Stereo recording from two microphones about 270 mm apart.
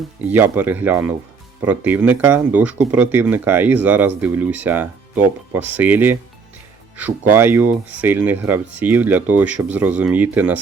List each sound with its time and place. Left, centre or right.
0.2 s speech: centre